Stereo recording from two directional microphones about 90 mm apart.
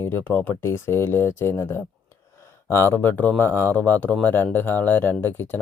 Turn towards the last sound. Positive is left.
turn(degrees=20)  # may be behind; listen again after turning